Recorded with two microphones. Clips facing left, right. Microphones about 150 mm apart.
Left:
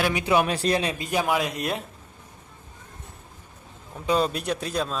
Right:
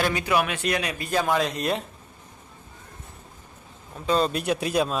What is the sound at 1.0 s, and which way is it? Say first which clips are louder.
Speech: right 4 dB; 15° left (ahead or behind).